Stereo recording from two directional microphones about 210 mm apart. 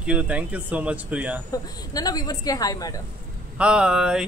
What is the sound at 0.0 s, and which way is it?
Speech, 5° right (ahead or behind).